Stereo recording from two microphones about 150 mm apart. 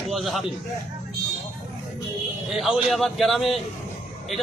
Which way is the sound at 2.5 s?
Centre (ahead or behind).